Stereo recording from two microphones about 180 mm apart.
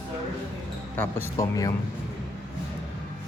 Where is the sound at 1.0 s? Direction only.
15° left (ahead or behind).